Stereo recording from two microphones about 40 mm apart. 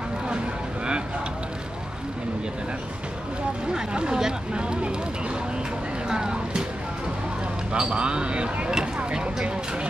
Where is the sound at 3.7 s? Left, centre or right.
Centre.